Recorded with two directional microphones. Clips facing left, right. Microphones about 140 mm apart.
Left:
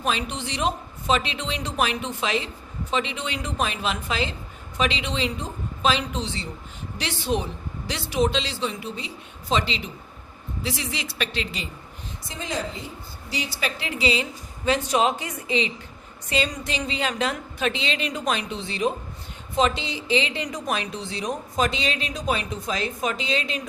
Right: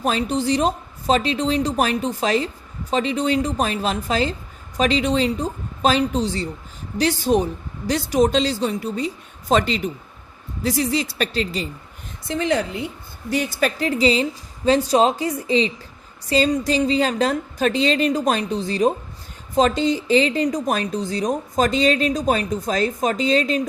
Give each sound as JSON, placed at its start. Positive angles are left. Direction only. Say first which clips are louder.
{"t": 0.0, "sound": "a woman's voice", "louder": "right 7 dB", "side_deg": -40}
{"t": 12.3, "sound": "a woman's voice", "louder": "right 9 dB", "side_deg": -65}
{"t": 13.3, "sound": "speech", "louder": "right 8 dB", "side_deg": -50}